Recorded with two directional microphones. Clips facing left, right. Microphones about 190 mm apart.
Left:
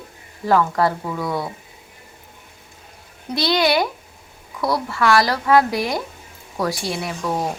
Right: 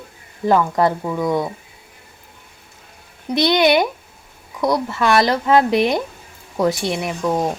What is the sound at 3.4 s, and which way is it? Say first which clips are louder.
Speech: right 4 dB; 20° right (ahead or behind).